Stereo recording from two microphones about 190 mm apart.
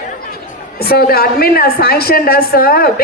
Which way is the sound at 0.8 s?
55° left (ahead or behind).